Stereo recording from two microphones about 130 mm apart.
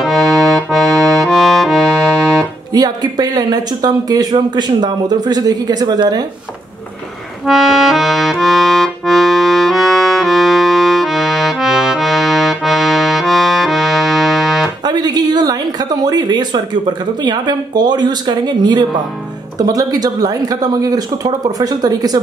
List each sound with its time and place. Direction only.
0.0 s accordion: centre (ahead or behind)
2.7 s speech: 30° right (ahead or behind)
7.4 s accordion: centre (ahead or behind)
14.9 s speech: 30° right (ahead or behind)